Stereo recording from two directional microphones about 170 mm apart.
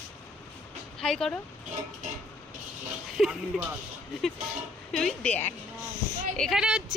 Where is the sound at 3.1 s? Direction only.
Centre (ahead or behind).